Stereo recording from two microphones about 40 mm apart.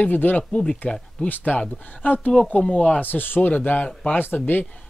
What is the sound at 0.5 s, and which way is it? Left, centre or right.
Speech, centre.